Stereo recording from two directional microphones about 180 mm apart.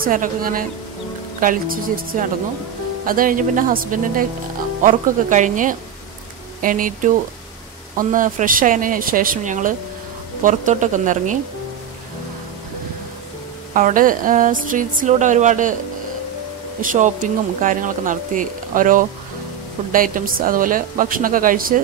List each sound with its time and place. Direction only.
0.0 s speech: 50° right (ahead or behind)
3.1 s speech: 50° right (ahead or behind)
13.7 s speech: 50° right (ahead or behind)
16.8 s speech: 45° right (ahead or behind)